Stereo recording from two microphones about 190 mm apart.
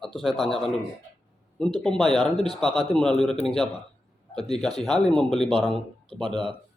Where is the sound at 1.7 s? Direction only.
Centre (ahead or behind).